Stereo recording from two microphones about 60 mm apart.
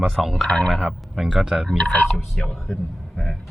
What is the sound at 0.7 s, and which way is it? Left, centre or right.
Speech, centre.